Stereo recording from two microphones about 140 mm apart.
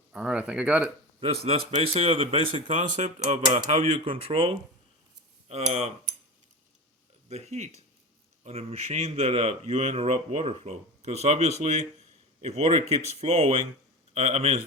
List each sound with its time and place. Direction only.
0.1 s speech: 5° right (ahead or behind)
1.2 s a man's voice: 45° right (ahead or behind)
2.6 s speech: 60° right (ahead or behind)
3.7 s speech: 45° right (ahead or behind)
5.5 s a man's voice: 50° right (ahead or behind)
7.3 s a man's voice: 50° right (ahead or behind)